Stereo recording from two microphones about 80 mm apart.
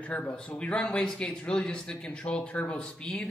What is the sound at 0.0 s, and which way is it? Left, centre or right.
Speech, centre.